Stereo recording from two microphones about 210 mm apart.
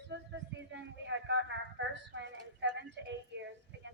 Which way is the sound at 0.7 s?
60° right (ahead or behind).